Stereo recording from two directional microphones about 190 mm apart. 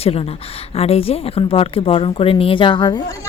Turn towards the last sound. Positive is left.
turn(degrees=25)  # may be behind; listen again after turning